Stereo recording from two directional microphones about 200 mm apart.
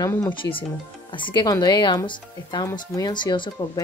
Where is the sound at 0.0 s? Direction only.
15° left (ahead or behind).